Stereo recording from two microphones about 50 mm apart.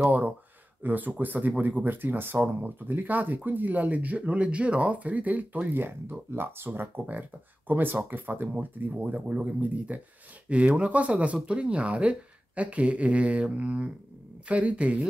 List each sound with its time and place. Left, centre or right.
0.8 s speech: right
5.7 s speech: right